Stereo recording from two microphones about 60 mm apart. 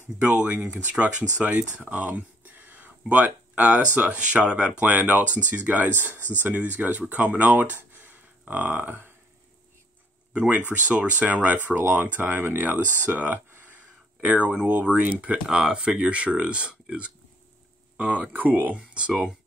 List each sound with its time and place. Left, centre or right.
0.2 s speech: right
7.9 s a sound: right
10.3 s speech: centre
15.4 s speech: centre